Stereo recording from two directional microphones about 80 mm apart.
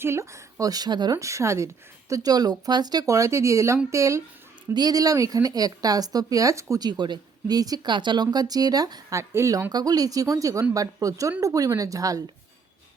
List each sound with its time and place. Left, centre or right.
0.0 s speech: right
0.6 s speech: right
1.1 s speech: right
4.7 s speech: right
6.8 s speech: right
7.9 s speech: right
9.3 s speech: right
9.7 s speech: right